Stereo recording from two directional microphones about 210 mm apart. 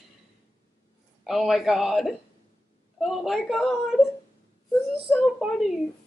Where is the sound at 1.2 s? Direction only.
Centre (ahead or behind).